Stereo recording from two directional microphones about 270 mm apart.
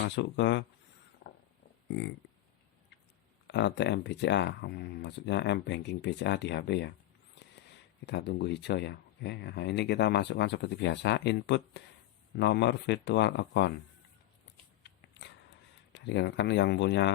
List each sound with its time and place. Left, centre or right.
0.2 s speech: left
1.9 s a sound: left
3.4 s speech: left
8.0 s speech: left
15.9 s speech: left